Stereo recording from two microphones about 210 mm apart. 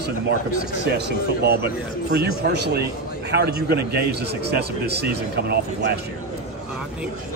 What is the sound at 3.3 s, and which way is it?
Speech, 50° right (ahead or behind).